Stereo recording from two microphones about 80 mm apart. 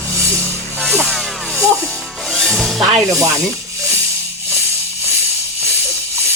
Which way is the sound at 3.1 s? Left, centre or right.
Right.